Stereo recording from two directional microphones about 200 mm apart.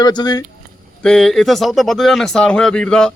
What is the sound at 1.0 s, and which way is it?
Speech, centre (ahead or behind).